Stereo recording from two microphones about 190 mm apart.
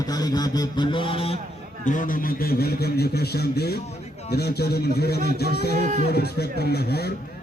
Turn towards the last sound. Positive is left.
turn(degrees=55)  # may be behind; listen again after turning